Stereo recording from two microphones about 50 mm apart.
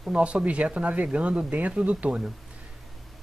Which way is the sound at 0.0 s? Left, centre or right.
Right.